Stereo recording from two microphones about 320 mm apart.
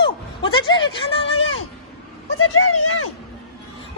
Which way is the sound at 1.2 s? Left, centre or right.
Left.